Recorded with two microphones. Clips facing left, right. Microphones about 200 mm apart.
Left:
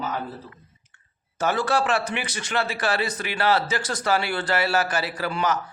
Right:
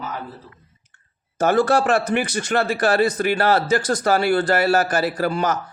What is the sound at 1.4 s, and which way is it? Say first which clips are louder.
Speech: right 6 dB; 45° right (ahead or behind).